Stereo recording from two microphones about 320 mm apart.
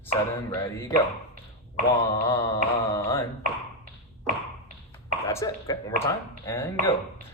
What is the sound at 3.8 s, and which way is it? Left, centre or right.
Tap, right.